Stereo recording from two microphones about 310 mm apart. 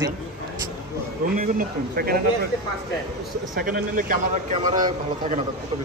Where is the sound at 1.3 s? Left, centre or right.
Right.